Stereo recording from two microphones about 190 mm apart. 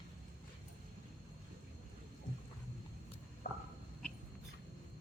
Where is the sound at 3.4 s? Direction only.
50° left (ahead or behind).